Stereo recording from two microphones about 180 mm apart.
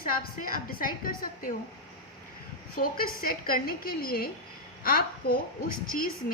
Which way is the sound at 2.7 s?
50° left (ahead or behind).